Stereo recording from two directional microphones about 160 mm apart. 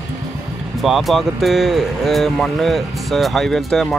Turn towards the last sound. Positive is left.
turn(degrees=0)  # may be behind; listen again after turning